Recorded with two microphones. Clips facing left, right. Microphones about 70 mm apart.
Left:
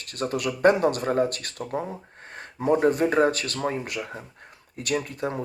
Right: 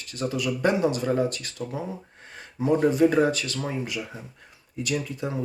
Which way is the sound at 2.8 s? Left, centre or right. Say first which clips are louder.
Right 2 dB; left.